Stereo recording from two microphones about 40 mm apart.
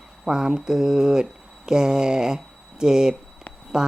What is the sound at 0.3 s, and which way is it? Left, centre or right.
Speech, centre.